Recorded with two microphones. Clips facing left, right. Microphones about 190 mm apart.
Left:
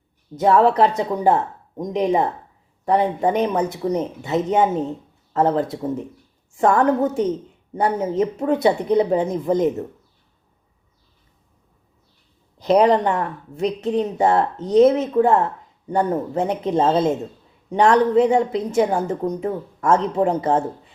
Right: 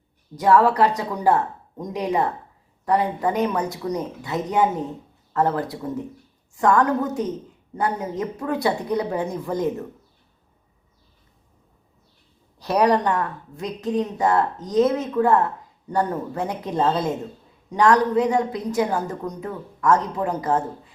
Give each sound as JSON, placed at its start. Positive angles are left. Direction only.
{"t": 0.3, "sound": "a woman's voice", "side_deg": 25}
{"t": 12.5, "sound": "a woman's voice", "side_deg": 20}